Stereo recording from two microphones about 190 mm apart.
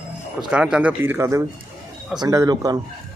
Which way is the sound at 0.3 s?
5° right (ahead or behind).